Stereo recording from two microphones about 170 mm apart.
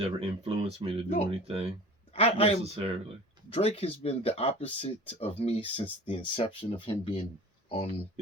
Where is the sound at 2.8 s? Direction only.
35° right (ahead or behind).